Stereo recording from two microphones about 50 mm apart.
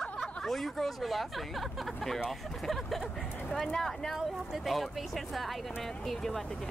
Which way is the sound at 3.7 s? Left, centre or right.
Centre.